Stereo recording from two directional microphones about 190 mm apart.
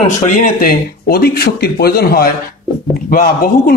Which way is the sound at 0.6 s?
55° left (ahead or behind).